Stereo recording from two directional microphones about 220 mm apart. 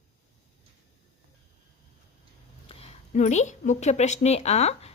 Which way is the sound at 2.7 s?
30° left (ahead or behind).